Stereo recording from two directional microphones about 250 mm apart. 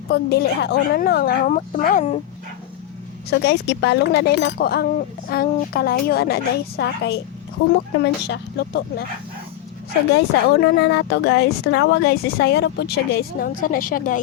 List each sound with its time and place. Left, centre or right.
0.1 s speech: left
3.2 s a woman's voice: left
10.8 s speech: left